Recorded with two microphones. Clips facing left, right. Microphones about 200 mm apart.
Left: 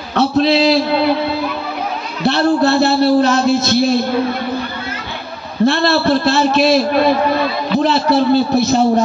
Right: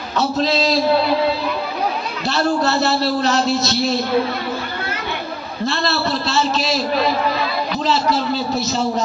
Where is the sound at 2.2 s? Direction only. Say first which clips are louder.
Left 6 dB; 60° left (ahead or behind).